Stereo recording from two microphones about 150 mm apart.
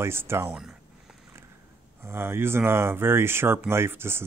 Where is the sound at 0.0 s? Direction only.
15° right (ahead or behind).